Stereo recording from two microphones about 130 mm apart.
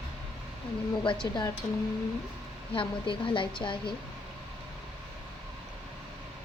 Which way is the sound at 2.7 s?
40° left (ahead or behind).